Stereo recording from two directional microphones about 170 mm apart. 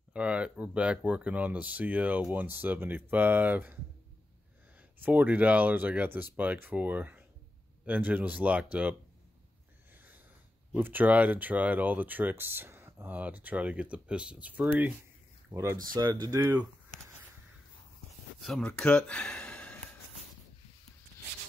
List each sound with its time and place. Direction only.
0.1 s speech: 5° right (ahead or behind)
5.0 s speech: 10° right (ahead or behind)
10.7 s speech: 10° right (ahead or behind)
18.4 s speech: 5° left (ahead or behind)